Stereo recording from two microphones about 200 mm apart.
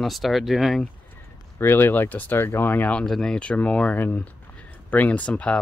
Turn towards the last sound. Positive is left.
turn(degrees=5)  # may be behind; listen again after turning